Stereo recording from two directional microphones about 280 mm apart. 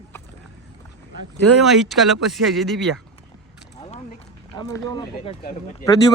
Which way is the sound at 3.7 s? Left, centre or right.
Left.